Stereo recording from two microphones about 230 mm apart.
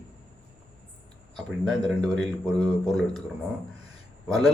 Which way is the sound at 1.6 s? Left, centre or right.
Centre.